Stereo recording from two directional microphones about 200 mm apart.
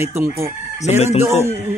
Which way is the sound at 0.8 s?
35° left (ahead or behind).